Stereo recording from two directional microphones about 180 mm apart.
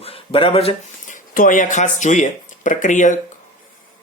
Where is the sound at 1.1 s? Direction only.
50° left (ahead or behind).